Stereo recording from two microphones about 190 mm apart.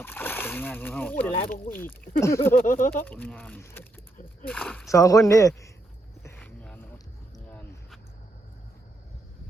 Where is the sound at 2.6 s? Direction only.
45° left (ahead or behind).